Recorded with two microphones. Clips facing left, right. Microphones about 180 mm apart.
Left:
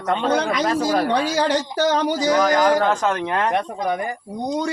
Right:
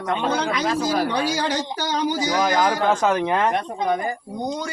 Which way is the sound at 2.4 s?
5° right (ahead or behind).